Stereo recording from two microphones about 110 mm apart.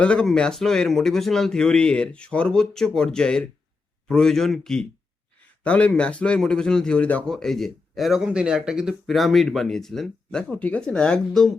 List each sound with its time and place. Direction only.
0.0 s speech: 10° left (ahead or behind)